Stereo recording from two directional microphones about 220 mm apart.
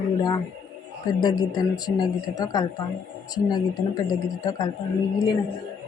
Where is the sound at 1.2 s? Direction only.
20° left (ahead or behind).